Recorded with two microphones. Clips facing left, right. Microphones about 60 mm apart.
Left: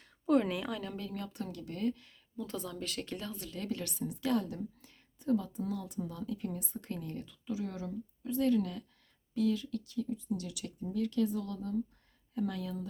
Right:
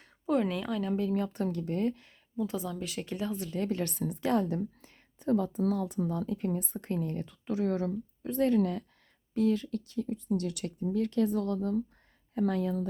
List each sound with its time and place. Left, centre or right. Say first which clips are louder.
0.0 s a woman's voice: even; centre
1.1 s speech: right 10 dB; right
2.4 s a woman's voice: right 6 dB; centre
3.6 s speech: right 6 dB; right
3.9 s speech: right 4 dB; right
4.2 s speech: right 4 dB; right
7.3 s speech: right 8 dB; right